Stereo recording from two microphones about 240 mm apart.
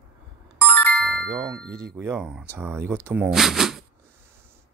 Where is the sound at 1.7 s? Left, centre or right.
Right.